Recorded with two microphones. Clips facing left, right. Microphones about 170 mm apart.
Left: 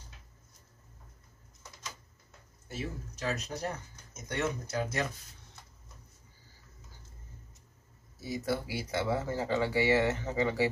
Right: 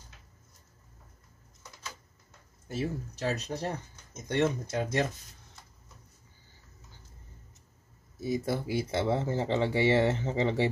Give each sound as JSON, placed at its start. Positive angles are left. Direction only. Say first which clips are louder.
{"t": 2.7, "sound": "speech", "louder": "right 6 dB", "side_deg": -35}
{"t": 8.2, "sound": "speech", "louder": "right 3 dB", "side_deg": -25}